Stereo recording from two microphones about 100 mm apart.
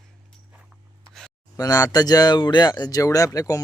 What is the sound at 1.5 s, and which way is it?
Speech, 35° left (ahead or behind).